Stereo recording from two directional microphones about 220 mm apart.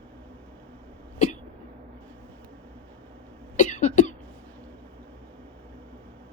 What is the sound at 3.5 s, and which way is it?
Cough, 35° left (ahead or behind).